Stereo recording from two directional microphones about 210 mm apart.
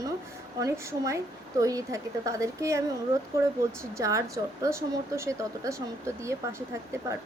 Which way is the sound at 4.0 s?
15° right (ahead or behind).